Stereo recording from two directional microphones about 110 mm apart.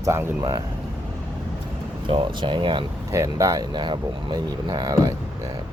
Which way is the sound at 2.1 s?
50° right (ahead or behind).